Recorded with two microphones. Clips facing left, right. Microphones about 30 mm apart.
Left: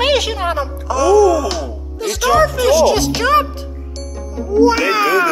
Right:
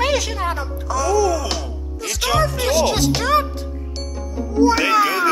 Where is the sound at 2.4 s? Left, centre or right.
Left.